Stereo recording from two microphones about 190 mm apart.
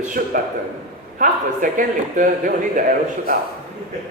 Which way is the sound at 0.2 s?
50° right (ahead or behind).